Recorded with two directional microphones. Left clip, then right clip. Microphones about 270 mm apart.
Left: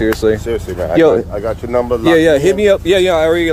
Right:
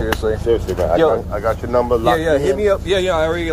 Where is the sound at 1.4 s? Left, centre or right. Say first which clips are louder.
Left 1 dB; left.